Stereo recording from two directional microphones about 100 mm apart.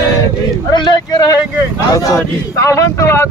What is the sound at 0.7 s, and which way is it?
Speech, 45° left (ahead or behind).